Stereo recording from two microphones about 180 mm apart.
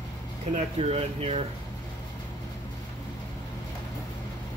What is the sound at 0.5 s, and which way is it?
Speech, 35° right (ahead or behind).